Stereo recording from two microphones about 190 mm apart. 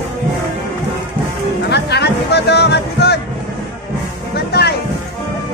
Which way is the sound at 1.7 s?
60° left (ahead or behind).